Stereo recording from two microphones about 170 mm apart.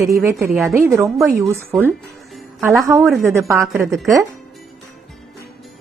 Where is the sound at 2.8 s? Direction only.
20° right (ahead or behind).